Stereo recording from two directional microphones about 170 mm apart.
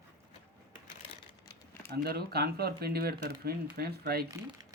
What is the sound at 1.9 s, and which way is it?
Speech, 65° right (ahead or behind).